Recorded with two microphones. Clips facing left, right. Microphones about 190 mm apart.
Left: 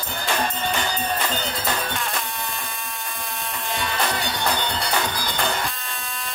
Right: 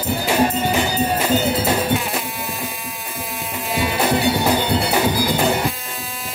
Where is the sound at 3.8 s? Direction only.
10° right (ahead or behind).